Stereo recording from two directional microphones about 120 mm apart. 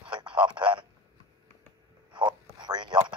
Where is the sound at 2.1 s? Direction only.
40° right (ahead or behind).